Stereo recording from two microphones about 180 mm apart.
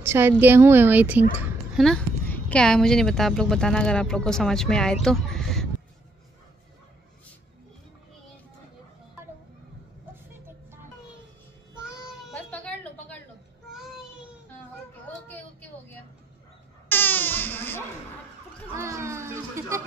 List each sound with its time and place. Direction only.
0.0 s a woman's voice: 15° right (ahead or behind)
1.8 s a woman's voice: 5° left (ahead or behind)
12.4 s a sound: 5° left (ahead or behind)
15.0 s child singing: 10° left (ahead or behind)
16.9 s baby cry: 10° left (ahead or behind)
18.8 s a sound: 15° right (ahead or behind)